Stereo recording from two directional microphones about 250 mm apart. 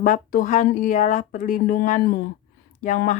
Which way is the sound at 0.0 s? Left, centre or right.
Left.